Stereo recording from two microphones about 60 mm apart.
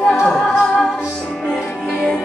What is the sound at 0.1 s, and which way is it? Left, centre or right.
Music, centre.